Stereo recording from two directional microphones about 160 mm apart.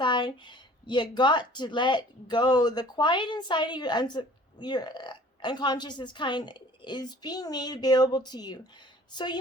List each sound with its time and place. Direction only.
0.0 s speech: 30° left (ahead or behind)